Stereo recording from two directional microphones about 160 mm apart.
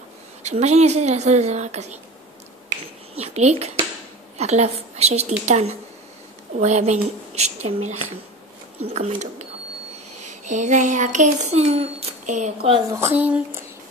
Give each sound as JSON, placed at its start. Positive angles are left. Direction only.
{"t": 0.4, "sound": "speech", "side_deg": -45}
{"t": 3.2, "sound": "speech", "side_deg": -40}
{"t": 12.8, "sound": "speech", "side_deg": -20}
{"t": 13.1, "sound": "a sound", "side_deg": -10}